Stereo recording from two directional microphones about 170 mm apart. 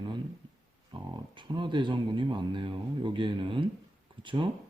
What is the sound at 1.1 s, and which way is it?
Speech, 30° right (ahead or behind).